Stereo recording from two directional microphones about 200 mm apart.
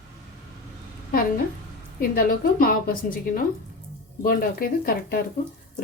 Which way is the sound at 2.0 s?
45° left (ahead or behind).